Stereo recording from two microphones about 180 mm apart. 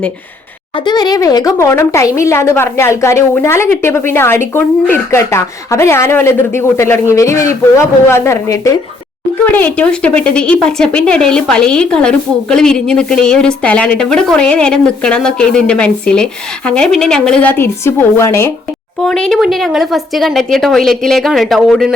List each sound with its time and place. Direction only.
0.9 s a woman's voice: 25° left (ahead or behind)
19.0 s a woman's voice: centre (ahead or behind)